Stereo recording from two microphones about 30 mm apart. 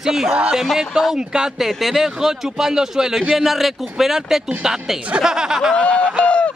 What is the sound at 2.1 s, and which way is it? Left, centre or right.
Speech, centre.